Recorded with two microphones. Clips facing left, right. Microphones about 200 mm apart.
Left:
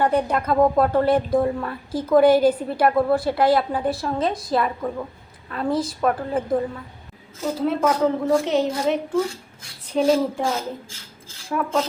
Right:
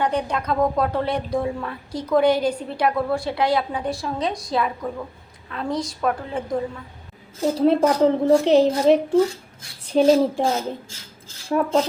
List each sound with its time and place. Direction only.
0.0 s a woman's voice: 5° left (ahead or behind)
7.6 s a woman's voice: 35° right (ahead or behind)